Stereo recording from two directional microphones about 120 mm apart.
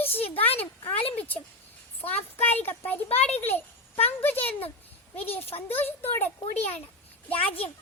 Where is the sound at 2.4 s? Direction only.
15° left (ahead or behind).